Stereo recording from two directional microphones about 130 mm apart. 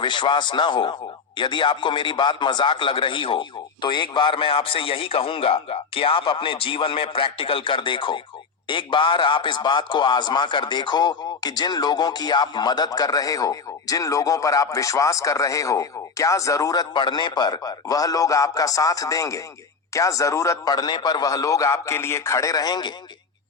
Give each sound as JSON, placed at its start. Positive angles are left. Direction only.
{"t": 0.0, "sound": "a man's voice", "side_deg": 40}